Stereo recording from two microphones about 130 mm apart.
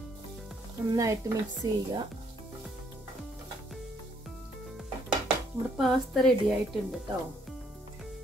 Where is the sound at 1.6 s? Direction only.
35° right (ahead or behind).